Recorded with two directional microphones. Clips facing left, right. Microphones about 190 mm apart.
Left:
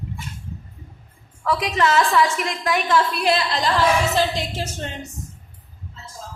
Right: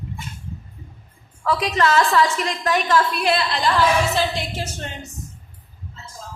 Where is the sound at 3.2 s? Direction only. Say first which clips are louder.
Even; 35° left (ahead or behind).